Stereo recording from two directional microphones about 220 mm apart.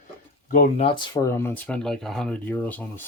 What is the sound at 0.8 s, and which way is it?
Speech, 25° left (ahead or behind).